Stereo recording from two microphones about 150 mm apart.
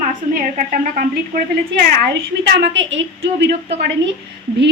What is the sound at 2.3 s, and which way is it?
Speech, 90° right.